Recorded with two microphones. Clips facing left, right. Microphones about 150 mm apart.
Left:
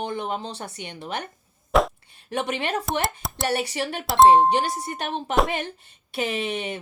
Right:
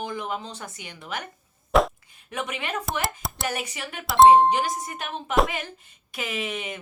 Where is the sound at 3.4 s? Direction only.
35° left (ahead or behind).